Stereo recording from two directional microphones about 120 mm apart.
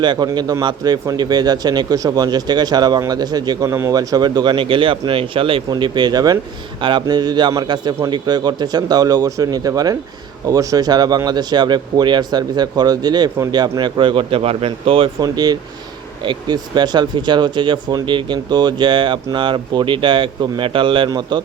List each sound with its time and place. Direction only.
0.0 s speech: 40° right (ahead or behind)
3.7 s speech: 20° right (ahead or behind); by 5.6 s 50° right (ahead or behind)
5.7 s speech: 40° right (ahead or behind)
15.2 s speech: 35° right (ahead or behind)